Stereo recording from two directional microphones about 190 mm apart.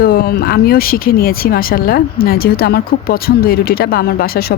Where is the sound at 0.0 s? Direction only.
55° left (ahead or behind).